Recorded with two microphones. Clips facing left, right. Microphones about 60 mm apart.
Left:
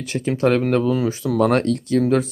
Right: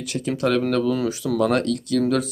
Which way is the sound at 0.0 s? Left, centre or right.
Left.